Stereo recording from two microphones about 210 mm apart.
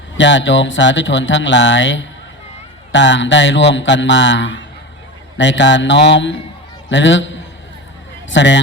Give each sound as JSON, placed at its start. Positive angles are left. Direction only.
{"t": 0.2, "sound": "speech", "side_deg": 60}